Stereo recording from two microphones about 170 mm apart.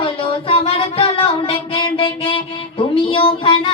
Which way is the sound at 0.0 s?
30° left (ahead or behind).